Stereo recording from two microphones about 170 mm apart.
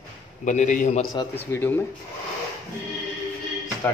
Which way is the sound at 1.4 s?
10° left (ahead or behind).